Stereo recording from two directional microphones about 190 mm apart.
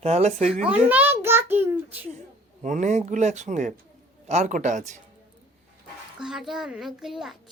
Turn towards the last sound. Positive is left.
turn(degrees=0)  # may be behind; listen again after turning